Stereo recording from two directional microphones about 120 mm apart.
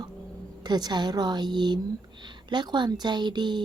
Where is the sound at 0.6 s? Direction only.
35° right (ahead or behind).